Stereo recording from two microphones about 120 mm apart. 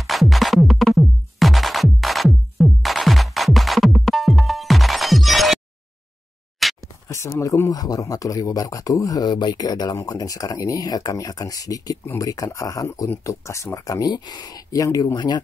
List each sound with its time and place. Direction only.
0.0 s music: centre (ahead or behind)
6.6 s a sound: centre (ahead or behind)
7.1 s speech: 25° left (ahead or behind)